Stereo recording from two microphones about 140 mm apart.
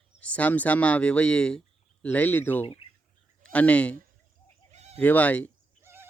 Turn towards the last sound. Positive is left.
turn(degrees=-15)  # may be behind; listen again after turning